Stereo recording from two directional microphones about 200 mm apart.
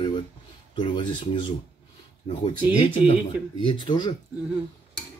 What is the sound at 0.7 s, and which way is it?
Speech, 25° left (ahead or behind).